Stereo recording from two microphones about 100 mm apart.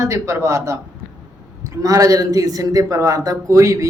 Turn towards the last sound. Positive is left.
turn(degrees=-35)  # may be behind; listen again after turning